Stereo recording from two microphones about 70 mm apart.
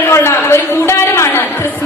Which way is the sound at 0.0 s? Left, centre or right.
Left.